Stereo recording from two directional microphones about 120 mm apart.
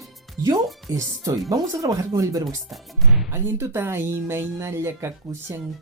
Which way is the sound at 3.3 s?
20° right (ahead or behind).